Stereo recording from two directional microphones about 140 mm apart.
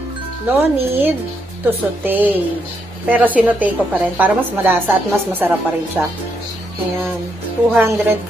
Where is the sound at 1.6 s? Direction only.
15° right (ahead or behind).